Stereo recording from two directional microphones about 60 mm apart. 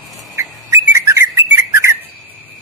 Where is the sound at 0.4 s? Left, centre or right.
Right.